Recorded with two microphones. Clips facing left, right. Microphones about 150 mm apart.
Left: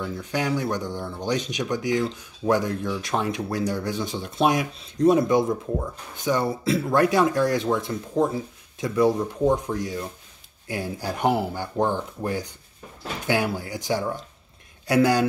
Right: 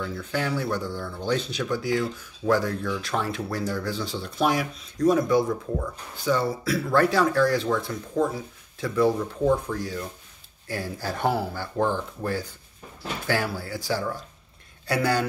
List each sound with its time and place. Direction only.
0.0 s speech: 15° left (ahead or behind)